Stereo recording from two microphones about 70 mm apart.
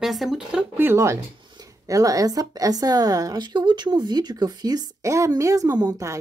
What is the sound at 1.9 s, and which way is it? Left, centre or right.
Speech, right.